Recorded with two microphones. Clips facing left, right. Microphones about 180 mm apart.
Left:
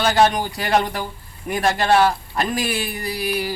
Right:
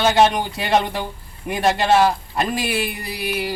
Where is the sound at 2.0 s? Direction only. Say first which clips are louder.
Right 1 dB; centre (ahead or behind).